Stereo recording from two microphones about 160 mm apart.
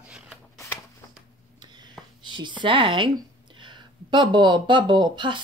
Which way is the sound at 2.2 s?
30° right (ahead or behind).